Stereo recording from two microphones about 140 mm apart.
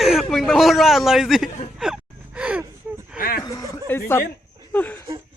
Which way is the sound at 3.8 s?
15° left (ahead or behind).